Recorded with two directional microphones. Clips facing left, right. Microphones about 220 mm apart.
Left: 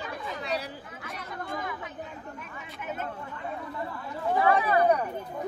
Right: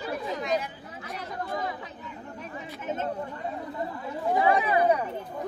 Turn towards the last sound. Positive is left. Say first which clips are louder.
# even
turn(degrees=-15)  # may be behind; listen again after turning